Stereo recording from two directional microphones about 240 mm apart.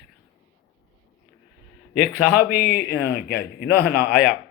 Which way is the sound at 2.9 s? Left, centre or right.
Left.